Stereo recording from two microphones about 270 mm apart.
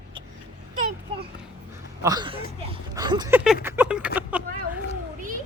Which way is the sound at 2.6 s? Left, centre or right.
Centre.